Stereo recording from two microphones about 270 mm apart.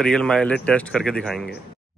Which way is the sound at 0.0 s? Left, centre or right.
Centre.